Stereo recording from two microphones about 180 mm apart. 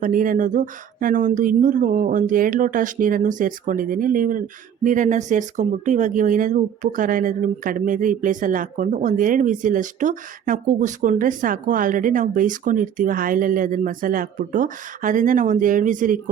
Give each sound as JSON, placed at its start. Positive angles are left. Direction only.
{"t": 0.0, "sound": "speech", "side_deg": -50}